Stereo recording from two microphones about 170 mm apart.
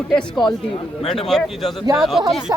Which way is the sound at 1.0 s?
5° left (ahead or behind).